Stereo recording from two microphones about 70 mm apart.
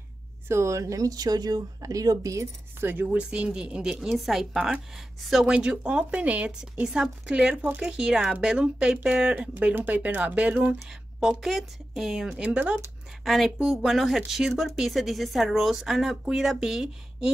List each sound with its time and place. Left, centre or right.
0.5 s a woman's voice: right
2.8 s speech: right
3.2 s speech: centre
10.9 s speech: centre
13.2 s speech: centre